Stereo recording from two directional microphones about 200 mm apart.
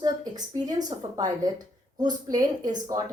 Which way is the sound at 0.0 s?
20° right (ahead or behind).